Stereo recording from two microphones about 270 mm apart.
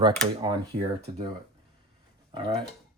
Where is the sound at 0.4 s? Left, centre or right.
Centre.